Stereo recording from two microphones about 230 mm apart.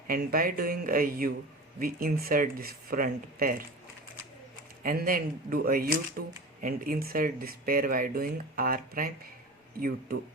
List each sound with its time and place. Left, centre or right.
0.1 s speech: right
4.8 s speech: right